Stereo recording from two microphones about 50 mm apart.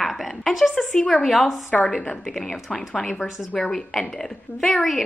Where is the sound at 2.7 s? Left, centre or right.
Centre.